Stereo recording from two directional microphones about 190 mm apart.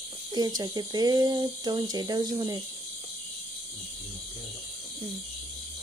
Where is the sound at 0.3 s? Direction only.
20° right (ahead or behind).